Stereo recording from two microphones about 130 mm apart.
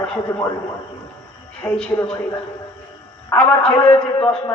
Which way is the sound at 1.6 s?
10° left (ahead or behind).